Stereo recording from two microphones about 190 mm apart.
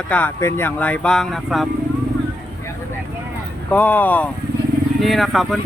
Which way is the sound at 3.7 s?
10° left (ahead or behind).